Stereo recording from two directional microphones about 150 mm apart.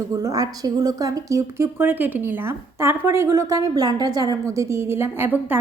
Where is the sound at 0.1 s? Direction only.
25° right (ahead or behind).